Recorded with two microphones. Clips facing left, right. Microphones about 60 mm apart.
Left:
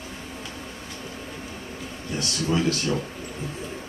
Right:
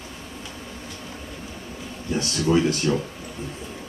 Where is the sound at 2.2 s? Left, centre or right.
Right.